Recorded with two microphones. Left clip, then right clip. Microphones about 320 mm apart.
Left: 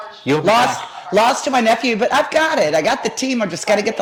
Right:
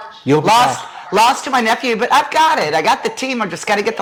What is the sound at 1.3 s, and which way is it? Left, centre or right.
Speech, right.